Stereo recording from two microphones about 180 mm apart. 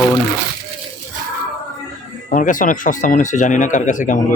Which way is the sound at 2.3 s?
45° left (ahead or behind).